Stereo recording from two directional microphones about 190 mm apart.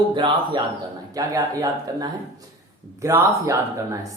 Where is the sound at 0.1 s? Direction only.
25° right (ahead or behind).